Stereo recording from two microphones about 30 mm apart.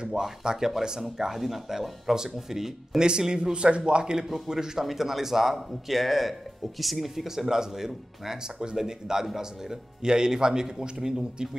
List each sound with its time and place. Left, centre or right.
0.1 s a man's voice: centre
3.0 s a man's voice: right
4.2 s speech: centre
7.2 s a man's voice: centre